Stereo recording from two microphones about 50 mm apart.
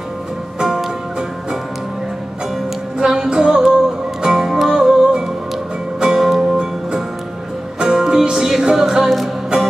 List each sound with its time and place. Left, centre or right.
0.6 s music: centre
3.0 s music: centre